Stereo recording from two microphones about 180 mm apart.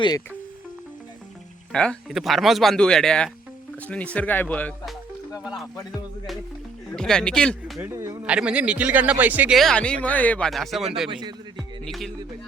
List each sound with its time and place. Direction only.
1.7 s speech: 5° left (ahead or behind)
5.4 s speech: centre (ahead or behind)
6.9 s speech: 5° left (ahead or behind)
7.8 s speech: 15° right (ahead or behind)
11.1 s speech: 25° right (ahead or behind)
11.5 s music: centre (ahead or behind)